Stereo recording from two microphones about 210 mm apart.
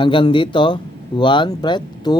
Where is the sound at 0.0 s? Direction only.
25° left (ahead or behind).